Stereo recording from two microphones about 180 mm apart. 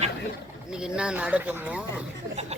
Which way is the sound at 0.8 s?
5° right (ahead or behind).